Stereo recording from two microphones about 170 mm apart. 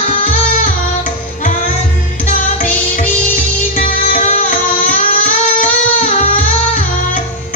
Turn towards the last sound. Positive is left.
turn(degrees=45)  # may be behind; listen again after turning